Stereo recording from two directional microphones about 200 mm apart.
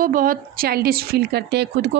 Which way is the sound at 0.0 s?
45° right (ahead or behind).